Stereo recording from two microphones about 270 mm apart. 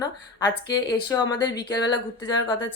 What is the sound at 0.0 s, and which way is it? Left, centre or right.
Speech, centre.